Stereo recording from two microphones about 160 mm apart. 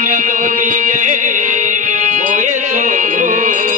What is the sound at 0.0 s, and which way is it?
Music, 50° right (ahead or behind).